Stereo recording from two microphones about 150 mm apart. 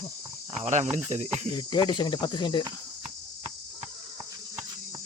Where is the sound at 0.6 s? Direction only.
55° right (ahead or behind).